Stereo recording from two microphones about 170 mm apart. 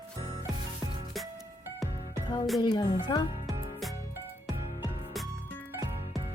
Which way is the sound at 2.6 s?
25° left (ahead or behind).